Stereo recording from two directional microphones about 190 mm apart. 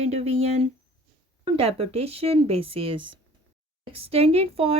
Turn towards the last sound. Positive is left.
turn(degrees=-30)  # may be behind; listen again after turning